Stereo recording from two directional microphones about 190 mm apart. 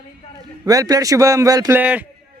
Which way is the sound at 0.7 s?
20° right (ahead or behind).